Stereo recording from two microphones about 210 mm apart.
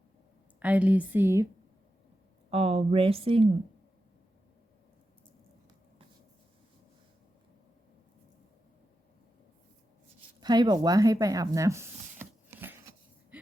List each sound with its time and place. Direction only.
0.6 s a woman's voice: 5° right (ahead or behind)
2.5 s speech: 25° right (ahead or behind)
10.4 s speech: 20° right (ahead or behind)
13.3 s a sound: 5° right (ahead or behind)